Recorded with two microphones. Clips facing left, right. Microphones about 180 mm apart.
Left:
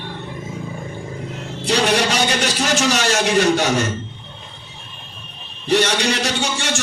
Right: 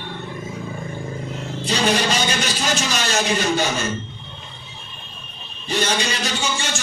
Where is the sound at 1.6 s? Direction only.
80° left.